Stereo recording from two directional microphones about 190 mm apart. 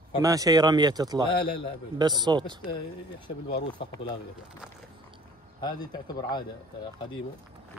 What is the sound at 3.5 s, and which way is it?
Speech, 30° left (ahead or behind).